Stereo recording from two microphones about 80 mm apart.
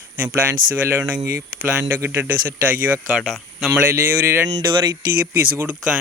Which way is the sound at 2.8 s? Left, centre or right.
Right.